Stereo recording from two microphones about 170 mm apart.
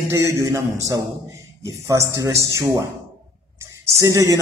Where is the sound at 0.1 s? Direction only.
15° right (ahead or behind).